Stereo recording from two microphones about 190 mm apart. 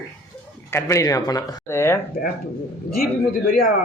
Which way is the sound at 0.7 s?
15° left (ahead or behind).